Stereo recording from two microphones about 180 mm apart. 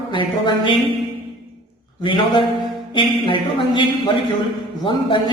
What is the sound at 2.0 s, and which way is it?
Speech, 25° left (ahead or behind).